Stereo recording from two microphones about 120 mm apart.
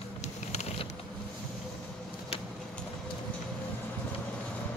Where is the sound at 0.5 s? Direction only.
60° left (ahead or behind).